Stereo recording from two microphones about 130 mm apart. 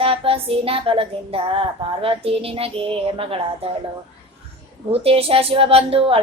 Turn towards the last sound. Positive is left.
turn(degrees=-50)  # may be behind; listen again after turning